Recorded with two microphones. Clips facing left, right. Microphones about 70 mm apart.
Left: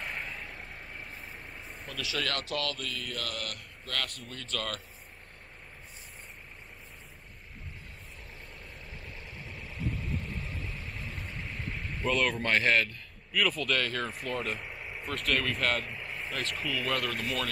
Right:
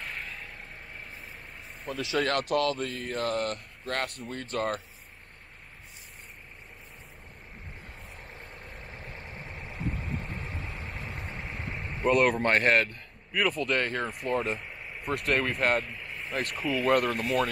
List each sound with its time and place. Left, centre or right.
1.9 s speech: right
8.3 s vehicle: right
14.2 s speech: right
14.6 s vehicle: centre
15.2 s speech: right
15.9 s vehicle: centre
16.5 s speech: centre
16.8 s speech: right